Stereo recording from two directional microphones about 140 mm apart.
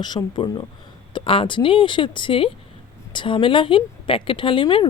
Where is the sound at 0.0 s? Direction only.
30° left (ahead or behind).